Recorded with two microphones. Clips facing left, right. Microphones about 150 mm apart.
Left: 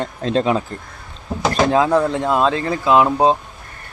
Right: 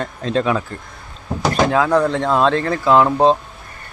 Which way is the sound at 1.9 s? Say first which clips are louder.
Right 1 dB; 10° left (ahead or behind).